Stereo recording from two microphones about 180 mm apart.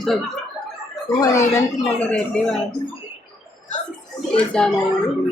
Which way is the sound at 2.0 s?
5° left (ahead or behind).